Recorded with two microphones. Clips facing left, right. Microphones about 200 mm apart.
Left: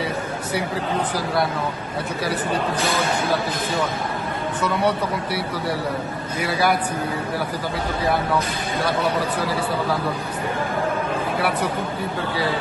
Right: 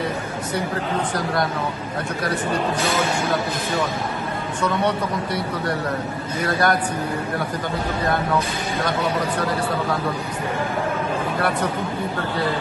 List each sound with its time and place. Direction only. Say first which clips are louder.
1.1 s speech: even; 5° left (ahead or behind)
4.6 s a man's voice: even; 5° left (ahead or behind)